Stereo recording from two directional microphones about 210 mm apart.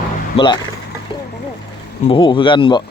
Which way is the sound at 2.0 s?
20° left (ahead or behind).